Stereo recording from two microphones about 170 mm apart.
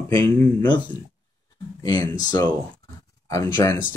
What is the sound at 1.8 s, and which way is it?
Speech, 20° left (ahead or behind).